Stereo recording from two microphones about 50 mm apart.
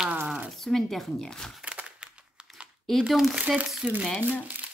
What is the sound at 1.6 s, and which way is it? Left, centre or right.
Crumpling, right.